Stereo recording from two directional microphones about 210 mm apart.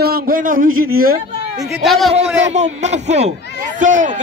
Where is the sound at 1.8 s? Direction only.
Centre (ahead or behind).